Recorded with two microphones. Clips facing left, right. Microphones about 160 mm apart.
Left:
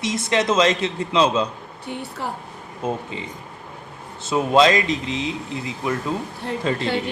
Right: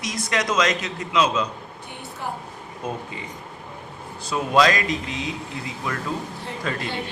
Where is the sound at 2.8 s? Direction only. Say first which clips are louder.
Left 5 dB; 25° left (ahead or behind).